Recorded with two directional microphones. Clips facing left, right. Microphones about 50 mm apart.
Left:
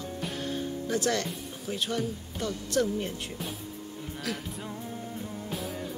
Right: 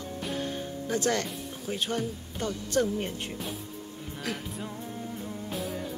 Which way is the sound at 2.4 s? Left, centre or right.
Right.